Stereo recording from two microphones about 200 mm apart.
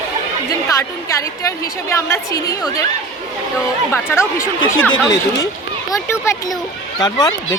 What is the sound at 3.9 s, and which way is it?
A woman's voice, 15° left (ahead or behind).